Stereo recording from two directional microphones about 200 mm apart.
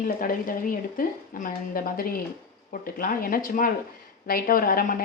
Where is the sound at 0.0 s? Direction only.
45° left (ahead or behind).